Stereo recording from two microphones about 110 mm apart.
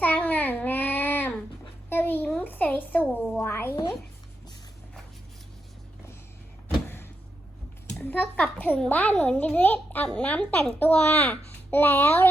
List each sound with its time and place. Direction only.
0.0 s babbling: 15° left (ahead or behind)
1.9 s a sound: 20° left (ahead or behind)
3.3 s speech: 20° left (ahead or behind)
8.0 s a child's voice: 15° left (ahead or behind)